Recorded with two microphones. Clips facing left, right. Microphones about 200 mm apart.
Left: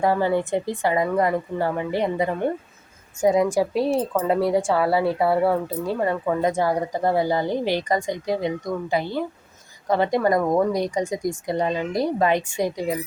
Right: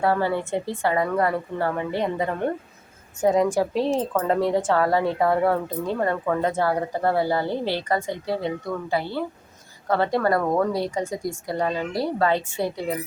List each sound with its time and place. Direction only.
0.0 s speech: 15° left (ahead or behind)